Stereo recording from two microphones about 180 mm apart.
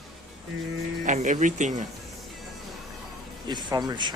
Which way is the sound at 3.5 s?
25° right (ahead or behind).